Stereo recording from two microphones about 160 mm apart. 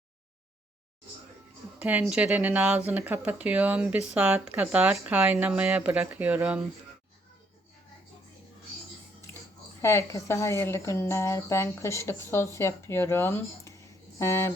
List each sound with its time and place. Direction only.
1.8 s speech: 10° right (ahead or behind)
9.3 s a sound: 15° left (ahead or behind)
9.8 s a woman's voice: 15° left (ahead or behind)